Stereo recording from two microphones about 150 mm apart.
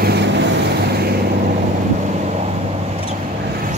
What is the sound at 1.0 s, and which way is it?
Vehicle, 90° right.